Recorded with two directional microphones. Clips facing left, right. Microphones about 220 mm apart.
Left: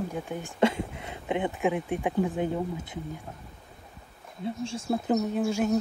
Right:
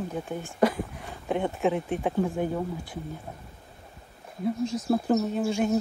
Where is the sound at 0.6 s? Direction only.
25° left (ahead or behind).